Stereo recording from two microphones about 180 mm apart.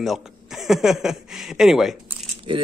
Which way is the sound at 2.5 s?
30° right (ahead or behind).